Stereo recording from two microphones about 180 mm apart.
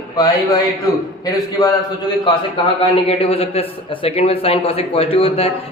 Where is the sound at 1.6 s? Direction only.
20° left (ahead or behind).